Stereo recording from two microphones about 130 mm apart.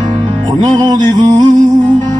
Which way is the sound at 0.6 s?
30° right (ahead or behind).